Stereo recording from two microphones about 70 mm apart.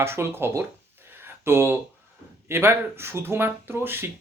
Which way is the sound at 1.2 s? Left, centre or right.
Right.